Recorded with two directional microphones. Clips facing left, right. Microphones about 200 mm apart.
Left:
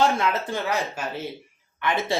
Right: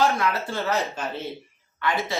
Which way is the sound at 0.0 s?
25° left (ahead or behind).